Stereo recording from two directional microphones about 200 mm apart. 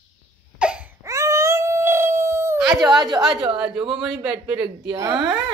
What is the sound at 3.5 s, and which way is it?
Speech, 5° right (ahead or behind).